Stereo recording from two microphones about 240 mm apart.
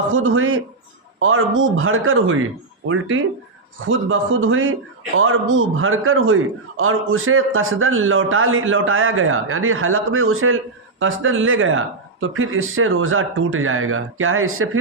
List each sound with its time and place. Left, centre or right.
0.1 s a man's voice: right